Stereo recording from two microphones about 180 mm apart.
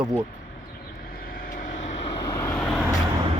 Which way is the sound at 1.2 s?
50° left (ahead or behind).